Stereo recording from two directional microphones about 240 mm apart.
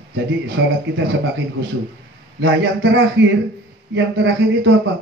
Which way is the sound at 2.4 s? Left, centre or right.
Right.